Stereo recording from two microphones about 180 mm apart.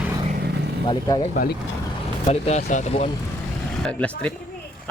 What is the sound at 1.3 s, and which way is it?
Speech, 50° left (ahead or behind).